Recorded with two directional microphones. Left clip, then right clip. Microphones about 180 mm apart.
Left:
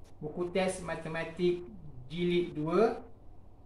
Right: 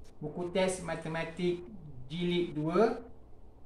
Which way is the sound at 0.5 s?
10° right (ahead or behind).